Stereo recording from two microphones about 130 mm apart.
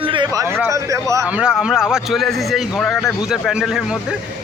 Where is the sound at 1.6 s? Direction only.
5° right (ahead or behind).